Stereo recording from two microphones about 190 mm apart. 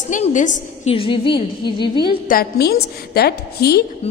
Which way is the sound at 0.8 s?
30° left (ahead or behind).